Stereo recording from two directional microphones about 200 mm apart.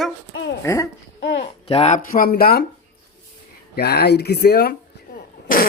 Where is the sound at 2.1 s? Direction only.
45° left (ahead or behind).